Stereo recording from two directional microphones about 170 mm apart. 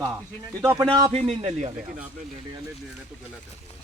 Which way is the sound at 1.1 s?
40° right (ahead or behind).